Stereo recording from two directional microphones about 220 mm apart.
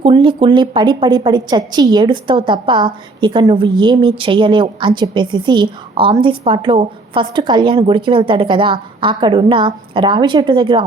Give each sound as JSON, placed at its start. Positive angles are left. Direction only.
{"t": 0.0, "sound": "a woman's voice", "side_deg": -20}